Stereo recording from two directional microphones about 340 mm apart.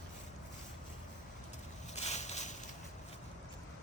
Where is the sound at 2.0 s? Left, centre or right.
Centre.